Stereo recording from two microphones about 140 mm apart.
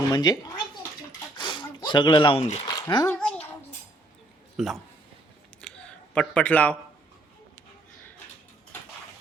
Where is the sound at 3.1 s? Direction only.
10° left (ahead or behind).